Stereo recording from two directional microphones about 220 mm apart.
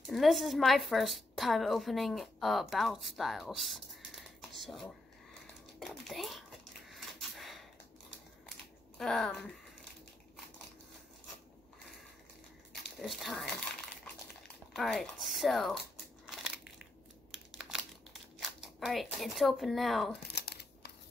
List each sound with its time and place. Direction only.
0.0 s a woman's voice: centre (ahead or behind)
6.9 s pant: centre (ahead or behind)
8.9 s speech: centre (ahead or behind)
13.0 s speech: centre (ahead or behind)
14.8 s speech: centre (ahead or behind)
16.3 s crushing: 5° right (ahead or behind)
17.6 s crumpling: centre (ahead or behind)
18.4 s speech: centre (ahead or behind)
20.3 s crumpling: 50° left (ahead or behind)